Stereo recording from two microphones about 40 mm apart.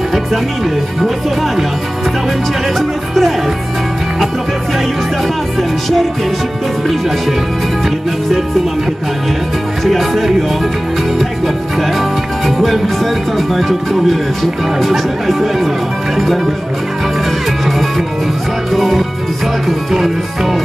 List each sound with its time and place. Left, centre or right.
2.8 s music: centre
5.6 s music: centre
9.8 s music: centre
18.7 s music: centre